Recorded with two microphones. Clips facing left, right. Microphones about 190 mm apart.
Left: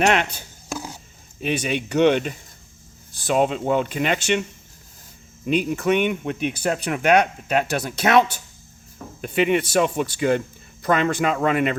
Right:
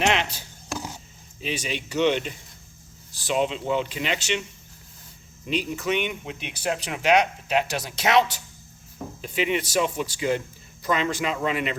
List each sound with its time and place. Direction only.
0.0 s speech: 55° left (ahead or behind)
5.5 s speech: 55° left (ahead or behind)